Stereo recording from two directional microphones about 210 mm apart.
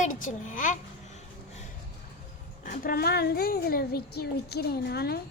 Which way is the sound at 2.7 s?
45° left (ahead or behind).